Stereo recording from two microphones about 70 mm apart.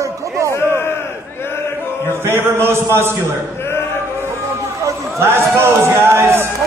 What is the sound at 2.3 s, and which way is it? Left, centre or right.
Speech, right.